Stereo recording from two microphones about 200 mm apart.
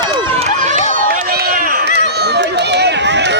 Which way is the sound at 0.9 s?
50° right (ahead or behind).